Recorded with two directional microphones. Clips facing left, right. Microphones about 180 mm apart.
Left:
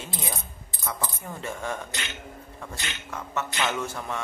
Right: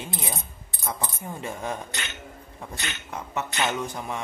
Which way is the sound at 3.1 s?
20° right (ahead or behind).